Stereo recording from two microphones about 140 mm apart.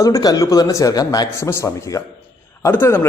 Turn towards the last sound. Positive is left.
turn(degrees=15)  # may be behind; listen again after turning